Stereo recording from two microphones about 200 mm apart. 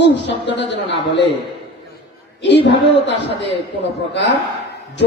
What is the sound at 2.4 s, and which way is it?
A man's voice, 60° left (ahead or behind).